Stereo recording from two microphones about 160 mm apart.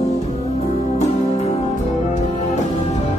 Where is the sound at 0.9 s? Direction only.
40° left (ahead or behind).